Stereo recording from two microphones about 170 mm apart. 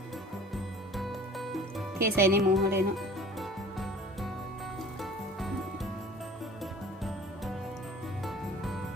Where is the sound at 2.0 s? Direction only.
65° right (ahead or behind).